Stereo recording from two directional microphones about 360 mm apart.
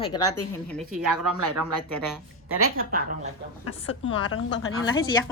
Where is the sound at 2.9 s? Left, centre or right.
Right.